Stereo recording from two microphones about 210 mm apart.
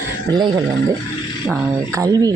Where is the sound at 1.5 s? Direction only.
10° right (ahead or behind).